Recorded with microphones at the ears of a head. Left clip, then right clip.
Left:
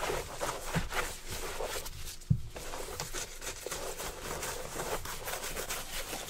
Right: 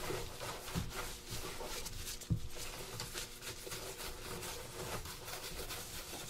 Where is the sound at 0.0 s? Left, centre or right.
Left.